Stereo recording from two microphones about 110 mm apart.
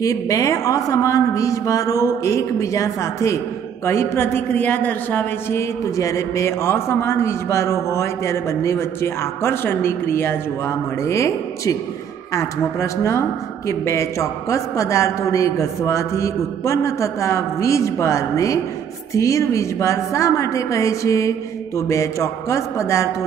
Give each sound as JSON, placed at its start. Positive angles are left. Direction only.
{"t": 0.0, "sound": "a woman's voice", "side_deg": 30}